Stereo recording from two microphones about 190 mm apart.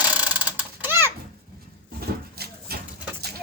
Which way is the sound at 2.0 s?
55° right (ahead or behind).